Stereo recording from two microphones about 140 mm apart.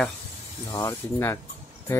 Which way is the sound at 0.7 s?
20° left (ahead or behind).